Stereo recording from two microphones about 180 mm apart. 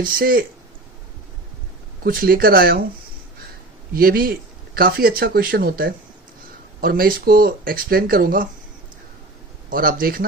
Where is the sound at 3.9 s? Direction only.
55° right (ahead or behind).